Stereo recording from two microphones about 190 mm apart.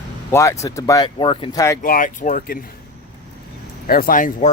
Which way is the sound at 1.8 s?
45° left (ahead or behind).